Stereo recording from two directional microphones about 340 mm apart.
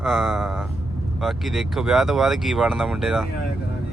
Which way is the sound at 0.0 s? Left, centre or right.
Centre.